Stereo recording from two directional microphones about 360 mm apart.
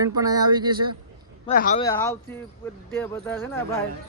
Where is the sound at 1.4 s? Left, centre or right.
Left.